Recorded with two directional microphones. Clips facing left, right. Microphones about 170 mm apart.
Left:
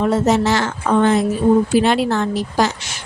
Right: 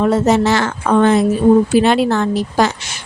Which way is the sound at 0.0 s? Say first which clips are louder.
Right 3 dB; 70° right (ahead or behind).